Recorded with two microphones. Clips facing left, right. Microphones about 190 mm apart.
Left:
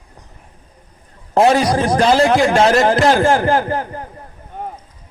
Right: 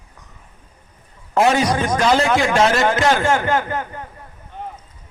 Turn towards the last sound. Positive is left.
turn(degrees=35)  # may be behind; listen again after turning